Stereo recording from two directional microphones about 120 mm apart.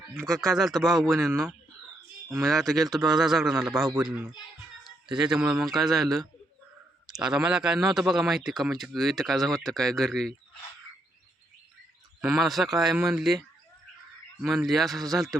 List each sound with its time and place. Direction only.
0.3 s speech: centre (ahead or behind)
2.3 s speech: centre (ahead or behind)
12.2 s speech: centre (ahead or behind)
14.7 s speech: centre (ahead or behind)